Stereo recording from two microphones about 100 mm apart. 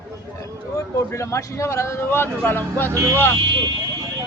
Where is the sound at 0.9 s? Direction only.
30° left (ahead or behind).